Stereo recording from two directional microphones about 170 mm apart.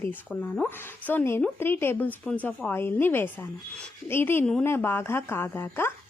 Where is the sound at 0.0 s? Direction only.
10° left (ahead or behind).